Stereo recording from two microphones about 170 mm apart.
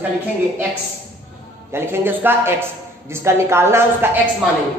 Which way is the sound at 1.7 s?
10° right (ahead or behind).